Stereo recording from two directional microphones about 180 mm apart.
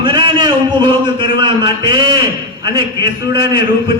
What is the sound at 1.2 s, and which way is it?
A man's voice, 25° right (ahead or behind).